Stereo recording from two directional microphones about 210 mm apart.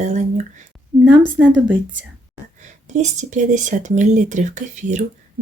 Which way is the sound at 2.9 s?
35° right (ahead or behind).